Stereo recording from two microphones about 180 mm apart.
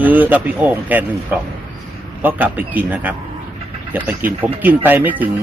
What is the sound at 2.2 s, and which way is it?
Speech, 10° right (ahead or behind).